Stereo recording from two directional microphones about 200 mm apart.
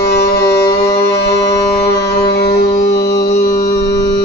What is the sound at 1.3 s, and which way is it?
Music, 20° left (ahead or behind).